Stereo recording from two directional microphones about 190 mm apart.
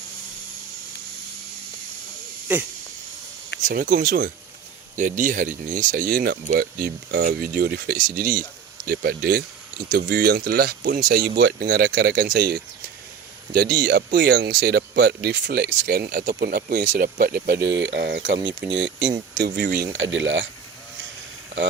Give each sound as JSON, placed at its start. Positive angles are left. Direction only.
{"t": 2.5, "sound": "speech", "side_deg": -10}
{"t": 3.6, "sound": "speech", "side_deg": -45}
{"t": 19.5, "sound": "speech", "side_deg": -60}
{"t": 20.0, "sound": "speech", "side_deg": -80}